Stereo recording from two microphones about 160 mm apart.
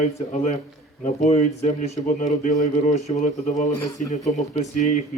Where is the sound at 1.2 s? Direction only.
45° left (ahead or behind).